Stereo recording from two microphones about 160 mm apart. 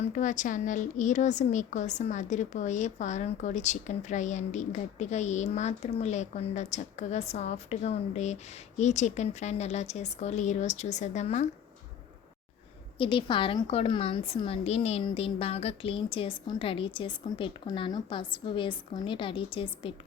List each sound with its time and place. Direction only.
0.0 s a woman's voice: 50° left (ahead or behind)
13.0 s a woman's voice: 30° left (ahead or behind)